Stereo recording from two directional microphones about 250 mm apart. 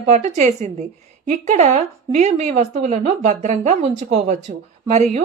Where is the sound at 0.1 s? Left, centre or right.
Right.